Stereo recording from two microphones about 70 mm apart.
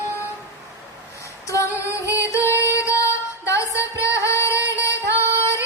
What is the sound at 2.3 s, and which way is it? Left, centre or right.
Music, left.